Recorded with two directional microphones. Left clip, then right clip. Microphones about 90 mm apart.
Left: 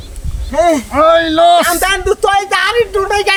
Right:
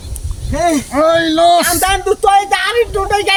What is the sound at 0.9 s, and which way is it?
Speech, 60° right (ahead or behind).